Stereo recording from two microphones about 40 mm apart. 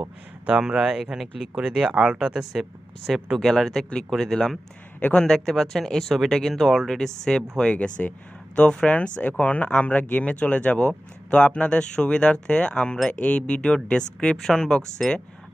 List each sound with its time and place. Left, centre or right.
0.5 s speech: right
1.1 s speech: centre
1.5 s speech: right
2.1 s speech: centre
3.3 s speech: centre
5.1 s speech: left
5.4 s speech: centre
8.0 s speech: left
9.7 s speech: left
9.9 s speech: left; by 15.2 s centre